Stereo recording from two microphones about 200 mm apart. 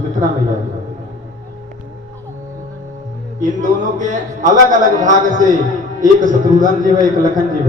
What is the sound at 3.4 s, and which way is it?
Speech, 40° right (ahead or behind).